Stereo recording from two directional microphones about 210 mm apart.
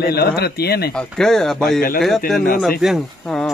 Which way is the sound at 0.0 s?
50° left (ahead or behind).